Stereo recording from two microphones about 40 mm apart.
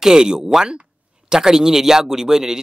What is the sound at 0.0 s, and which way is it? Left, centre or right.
Speech, centre.